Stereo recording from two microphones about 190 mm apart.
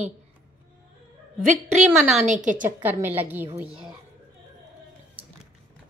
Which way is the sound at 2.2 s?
40° right (ahead or behind).